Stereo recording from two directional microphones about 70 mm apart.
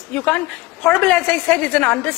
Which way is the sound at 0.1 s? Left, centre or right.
Centre.